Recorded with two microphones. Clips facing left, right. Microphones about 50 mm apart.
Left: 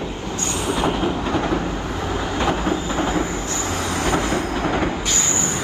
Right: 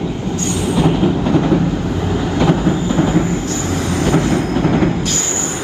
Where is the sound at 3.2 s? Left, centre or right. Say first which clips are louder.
Right 6 dB; right.